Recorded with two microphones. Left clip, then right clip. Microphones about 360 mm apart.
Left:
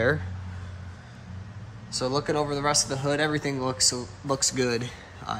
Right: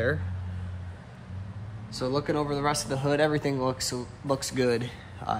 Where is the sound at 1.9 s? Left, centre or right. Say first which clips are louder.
Left 2 dB; centre.